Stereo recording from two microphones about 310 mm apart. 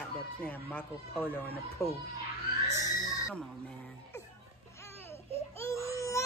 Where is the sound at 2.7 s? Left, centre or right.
Centre.